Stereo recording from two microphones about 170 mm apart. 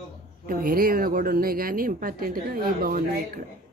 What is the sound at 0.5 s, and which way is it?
A woman's voice, 60° right (ahead or behind).